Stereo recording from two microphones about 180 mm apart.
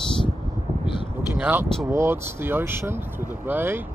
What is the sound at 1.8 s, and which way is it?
Speech, 15° right (ahead or behind).